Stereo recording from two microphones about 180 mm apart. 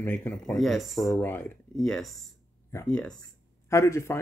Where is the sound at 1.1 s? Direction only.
10° left (ahead or behind).